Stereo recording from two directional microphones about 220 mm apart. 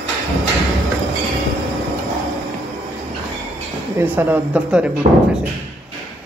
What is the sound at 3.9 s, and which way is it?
Speech, 10° right (ahead or behind).